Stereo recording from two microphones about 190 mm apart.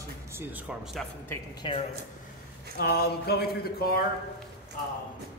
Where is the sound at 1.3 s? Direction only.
25° left (ahead or behind).